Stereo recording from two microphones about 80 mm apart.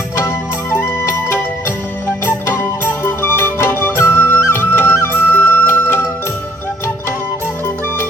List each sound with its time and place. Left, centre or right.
0.3 s music: left
2.2 s music: left